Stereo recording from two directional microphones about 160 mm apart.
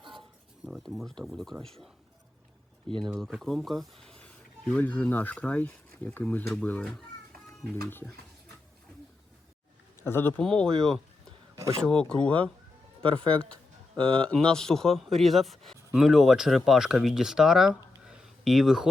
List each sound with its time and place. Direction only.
0.0 s a sound: 30° right (ahead or behind)
0.6 s speech: centre (ahead or behind)
3.2 s speech: 5° left (ahead or behind)
10.0 s speech: 15° left (ahead or behind)
13.0 s speech: 30° right (ahead or behind)
14.2 s speech: 5° left (ahead or behind)